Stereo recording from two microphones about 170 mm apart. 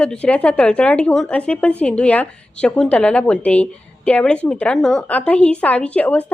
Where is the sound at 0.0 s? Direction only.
5° left (ahead or behind).